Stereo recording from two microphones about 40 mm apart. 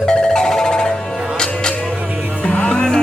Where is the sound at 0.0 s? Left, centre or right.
Left.